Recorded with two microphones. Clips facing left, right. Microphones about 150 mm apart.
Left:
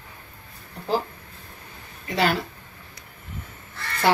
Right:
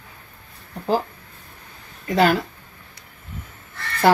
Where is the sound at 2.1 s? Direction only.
45° right (ahead or behind).